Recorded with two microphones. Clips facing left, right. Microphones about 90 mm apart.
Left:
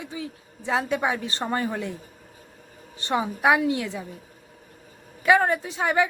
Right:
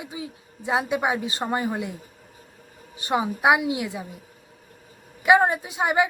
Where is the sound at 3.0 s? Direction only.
15° right (ahead or behind).